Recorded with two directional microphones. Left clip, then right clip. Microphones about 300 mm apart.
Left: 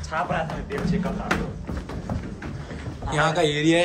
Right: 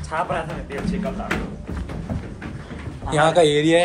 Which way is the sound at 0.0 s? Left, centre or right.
Centre.